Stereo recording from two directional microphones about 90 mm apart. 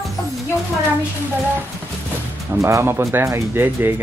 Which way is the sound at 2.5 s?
30° right (ahead or behind).